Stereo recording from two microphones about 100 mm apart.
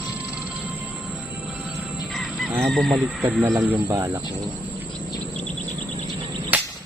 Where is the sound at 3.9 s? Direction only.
35° right (ahead or behind).